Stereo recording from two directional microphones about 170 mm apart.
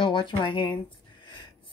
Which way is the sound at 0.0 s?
30° left (ahead or behind).